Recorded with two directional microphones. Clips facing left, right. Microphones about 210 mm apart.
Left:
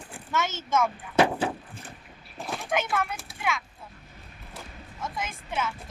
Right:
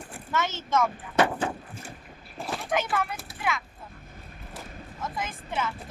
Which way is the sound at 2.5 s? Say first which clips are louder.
Even; centre (ahead or behind).